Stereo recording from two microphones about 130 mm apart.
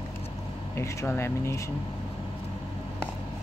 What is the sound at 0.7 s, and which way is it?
Speech, 20° left (ahead or behind).